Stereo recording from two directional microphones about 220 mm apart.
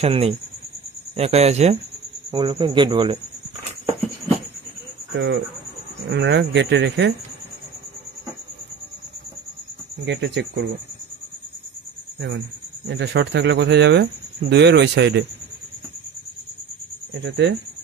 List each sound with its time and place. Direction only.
0.0 s a man's voice: 25° right (ahead or behind)
5.1 s speech: 55° right (ahead or behind)
10.0 s speech: 50° right (ahead or behind)
12.8 s speech: 55° right (ahead or behind)
17.1 s speech: 55° right (ahead or behind)